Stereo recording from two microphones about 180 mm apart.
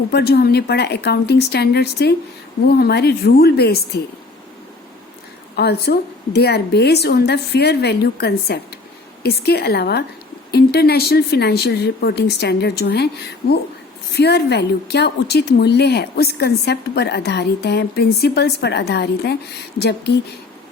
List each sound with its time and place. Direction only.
0.1 s a woman's voice: 60° left (ahead or behind)
5.5 s a woman's voice: 65° left (ahead or behind)
14.1 s a woman's voice: 65° left (ahead or behind)